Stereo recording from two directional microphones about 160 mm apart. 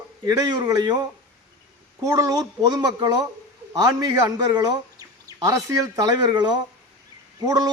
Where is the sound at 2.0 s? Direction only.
20° right (ahead or behind).